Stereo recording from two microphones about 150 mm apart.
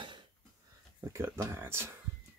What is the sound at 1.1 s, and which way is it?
Speech, 15° right (ahead or behind).